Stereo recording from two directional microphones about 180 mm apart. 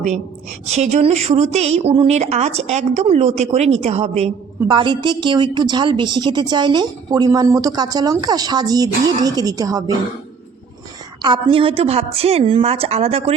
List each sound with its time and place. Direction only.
0.6 s a woman's voice: 40° right (ahead or behind); by 9.9 s 20° right (ahead or behind)
11.2 s a woman's voice: 25° right (ahead or behind)